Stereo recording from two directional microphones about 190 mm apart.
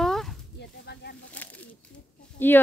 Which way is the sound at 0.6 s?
60° left (ahead or behind).